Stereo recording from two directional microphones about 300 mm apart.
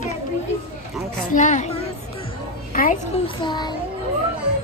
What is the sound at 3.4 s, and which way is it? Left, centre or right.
Speech, centre.